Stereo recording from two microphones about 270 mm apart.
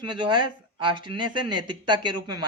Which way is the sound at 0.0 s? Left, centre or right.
Centre.